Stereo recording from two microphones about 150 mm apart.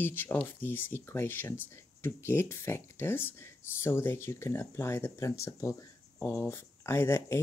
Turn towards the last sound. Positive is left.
turn(degrees=15)  # may be behind; listen again after turning